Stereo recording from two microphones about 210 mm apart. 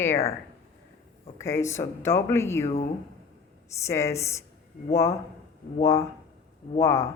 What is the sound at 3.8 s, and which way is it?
Speech, 15° left (ahead or behind).